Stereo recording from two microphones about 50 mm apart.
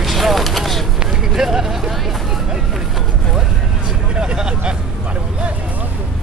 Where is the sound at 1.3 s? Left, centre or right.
Centre.